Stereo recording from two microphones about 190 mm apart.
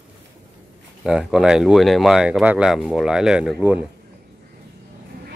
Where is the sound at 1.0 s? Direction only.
5° right (ahead or behind).